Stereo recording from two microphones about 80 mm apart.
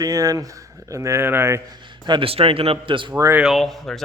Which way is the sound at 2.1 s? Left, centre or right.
Right.